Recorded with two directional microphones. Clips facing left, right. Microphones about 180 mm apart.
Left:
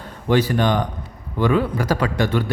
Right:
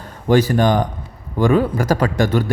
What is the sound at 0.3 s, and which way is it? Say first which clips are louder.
A man's voice: right 3 dB; 45° right (ahead or behind).